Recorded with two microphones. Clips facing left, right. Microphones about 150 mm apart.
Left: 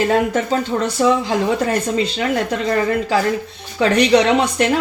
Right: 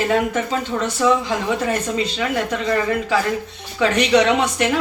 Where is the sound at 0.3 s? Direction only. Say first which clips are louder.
Left 3 dB; 35° left (ahead or behind).